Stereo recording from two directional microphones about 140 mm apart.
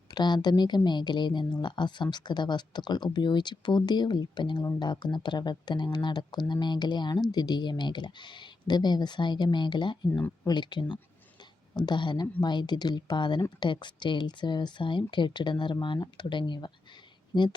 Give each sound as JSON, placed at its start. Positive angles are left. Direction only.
{"t": 0.1, "sound": "speech", "side_deg": 30}
{"t": 10.1, "sound": "speech", "side_deg": 15}
{"t": 10.4, "sound": "speech", "side_deg": 30}